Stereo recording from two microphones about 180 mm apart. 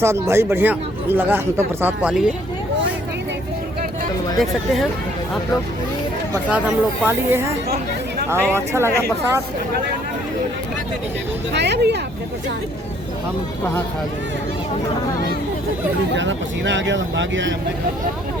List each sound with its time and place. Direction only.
0.0 s speech: 15° right (ahead or behind)
4.4 s speech: centre (ahead or behind)
6.5 s speech: 10° right (ahead or behind)
11.5 s speech: 70° right (ahead or behind)
16.1 s speech: 90° right